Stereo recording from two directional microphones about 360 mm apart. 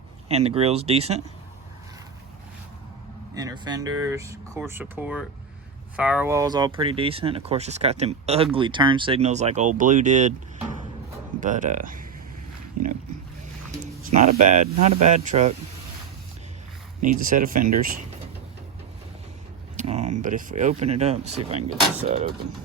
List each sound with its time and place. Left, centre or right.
0.3 s speech: centre
3.3 s speech: centre
11.3 s speech: right
12.8 s speech: right
14.0 s speech: centre
17.0 s speech: right
19.7 s speech: centre